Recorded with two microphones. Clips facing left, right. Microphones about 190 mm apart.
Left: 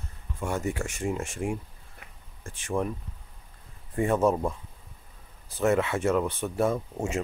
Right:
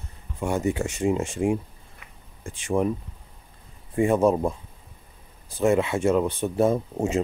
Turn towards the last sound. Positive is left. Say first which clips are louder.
# right 5 dB
turn(degrees=-20)  # may be behind; listen again after turning